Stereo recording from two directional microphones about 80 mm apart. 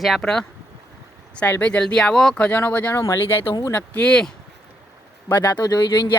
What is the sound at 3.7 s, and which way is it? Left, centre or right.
Speech, centre.